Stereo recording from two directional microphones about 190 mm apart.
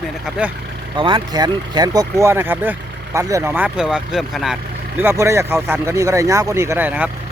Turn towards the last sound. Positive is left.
turn(degrees=-10)  # may be behind; listen again after turning